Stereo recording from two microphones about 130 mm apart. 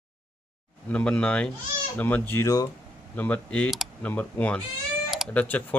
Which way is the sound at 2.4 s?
30° left (ahead or behind).